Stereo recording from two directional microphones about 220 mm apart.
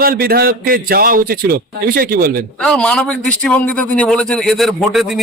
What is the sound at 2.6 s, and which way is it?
Speech, 5° left (ahead or behind).